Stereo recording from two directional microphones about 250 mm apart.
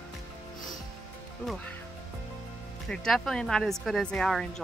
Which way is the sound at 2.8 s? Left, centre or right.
Centre.